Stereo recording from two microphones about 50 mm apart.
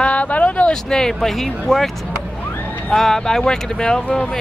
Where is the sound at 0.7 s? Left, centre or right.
Centre.